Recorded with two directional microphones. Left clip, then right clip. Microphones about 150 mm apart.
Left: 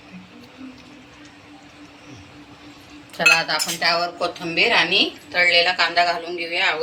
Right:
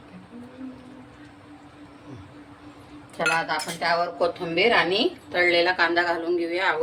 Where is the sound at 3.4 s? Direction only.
45° right (ahead or behind); by 5.0 s 60° right (ahead or behind).